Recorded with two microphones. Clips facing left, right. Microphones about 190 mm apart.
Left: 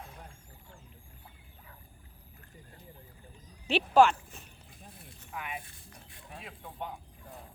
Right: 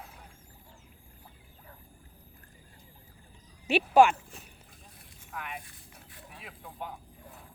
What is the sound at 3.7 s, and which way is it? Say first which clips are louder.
Speech: right 2 dB; 10° right (ahead or behind).